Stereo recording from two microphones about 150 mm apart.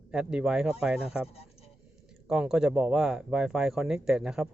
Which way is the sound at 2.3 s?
5° right (ahead or behind).